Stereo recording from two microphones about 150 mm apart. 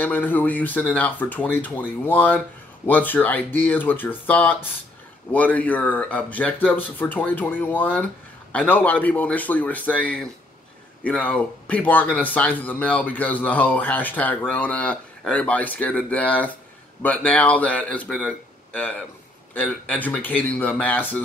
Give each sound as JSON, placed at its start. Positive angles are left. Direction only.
{"t": 0.0, "sound": "speech", "side_deg": 10}